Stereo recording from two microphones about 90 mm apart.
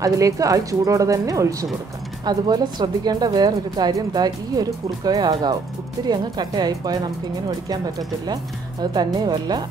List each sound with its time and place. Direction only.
0.0 s speech: 40° right (ahead or behind)
2.2 s speech: 50° right (ahead or behind)